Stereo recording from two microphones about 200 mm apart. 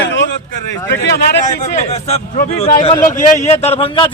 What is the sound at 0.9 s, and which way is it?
Speech, 60° left (ahead or behind).